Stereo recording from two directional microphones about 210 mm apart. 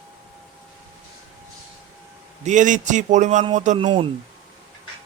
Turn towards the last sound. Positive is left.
turn(degrees=-25)  # may be behind; listen again after turning